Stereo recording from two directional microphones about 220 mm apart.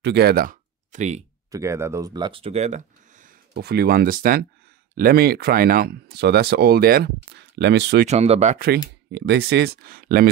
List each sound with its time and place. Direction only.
0.0 s speech: 50° right (ahead or behind)
1.5 s speech: 15° right (ahead or behind); by 8.1 s 50° right (ahead or behind)
8.1 s speech: 30° right (ahead or behind)
8.5 s speech: 45° right (ahead or behind)